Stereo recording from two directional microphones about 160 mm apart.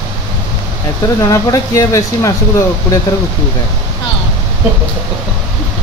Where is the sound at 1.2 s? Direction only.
20° left (ahead or behind).